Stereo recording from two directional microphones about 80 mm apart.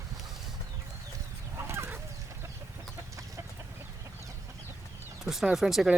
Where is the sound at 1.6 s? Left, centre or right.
Right.